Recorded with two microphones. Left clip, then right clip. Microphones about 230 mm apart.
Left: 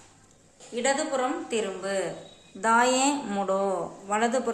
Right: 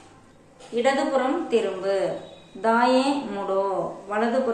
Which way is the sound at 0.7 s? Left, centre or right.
Left.